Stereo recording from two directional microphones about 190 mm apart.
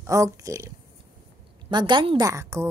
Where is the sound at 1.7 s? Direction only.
25° right (ahead or behind).